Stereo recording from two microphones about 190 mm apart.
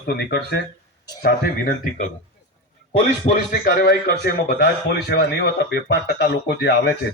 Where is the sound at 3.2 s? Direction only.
45° left (ahead or behind); by 6.9 s 65° left (ahead or behind).